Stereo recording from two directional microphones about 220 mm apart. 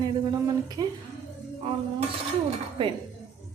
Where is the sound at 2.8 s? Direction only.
20° right (ahead or behind).